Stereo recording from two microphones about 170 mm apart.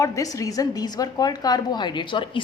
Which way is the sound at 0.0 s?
20° left (ahead or behind).